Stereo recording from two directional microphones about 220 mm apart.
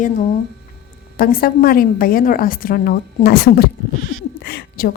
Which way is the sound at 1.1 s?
40° left (ahead or behind).